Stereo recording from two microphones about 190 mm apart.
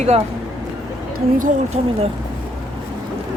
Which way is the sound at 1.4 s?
35° right (ahead or behind).